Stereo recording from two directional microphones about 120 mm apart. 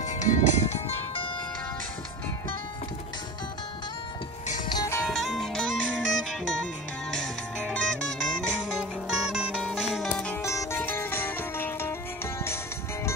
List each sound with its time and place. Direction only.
0.0 s music: 90° left
5.0 s music: centre (ahead or behind)
10.0 s music: 10° left (ahead or behind)
10.4 s music: 25° left (ahead or behind)